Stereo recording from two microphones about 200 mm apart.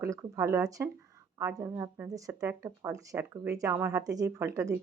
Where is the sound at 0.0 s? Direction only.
15° right (ahead or behind).